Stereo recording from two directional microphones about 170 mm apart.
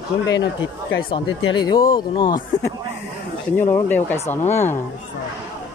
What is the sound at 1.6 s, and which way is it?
Speech, 30° left (ahead or behind).